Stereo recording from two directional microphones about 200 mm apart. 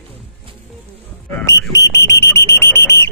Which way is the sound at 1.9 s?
15° left (ahead or behind).